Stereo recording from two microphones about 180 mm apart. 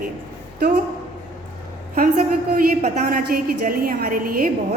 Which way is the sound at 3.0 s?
55° right (ahead or behind).